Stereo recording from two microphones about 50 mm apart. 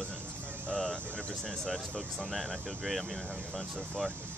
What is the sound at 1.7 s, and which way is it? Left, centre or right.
Speech, centre.